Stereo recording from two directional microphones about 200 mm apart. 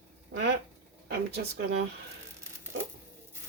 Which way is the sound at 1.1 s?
60° right (ahead or behind).